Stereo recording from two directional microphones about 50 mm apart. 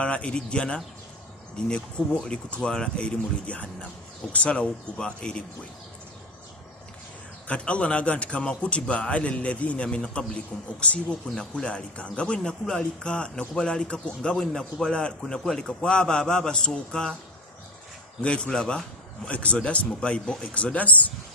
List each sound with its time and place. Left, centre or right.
0.0 s a man's voice: left
2.2 s a man's voice: centre
7.4 s a man's voice: left
18.2 s a man's voice: left